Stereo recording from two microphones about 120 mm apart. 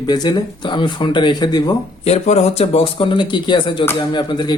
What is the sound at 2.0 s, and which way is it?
Speech, 60° left (ahead or behind).